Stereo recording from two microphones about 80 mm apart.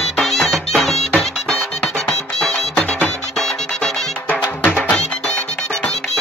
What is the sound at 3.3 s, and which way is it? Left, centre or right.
Music, centre.